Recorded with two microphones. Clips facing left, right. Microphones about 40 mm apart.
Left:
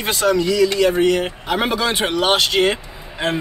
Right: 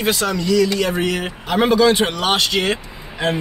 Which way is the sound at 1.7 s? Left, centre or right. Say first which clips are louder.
Right 5 dB; centre.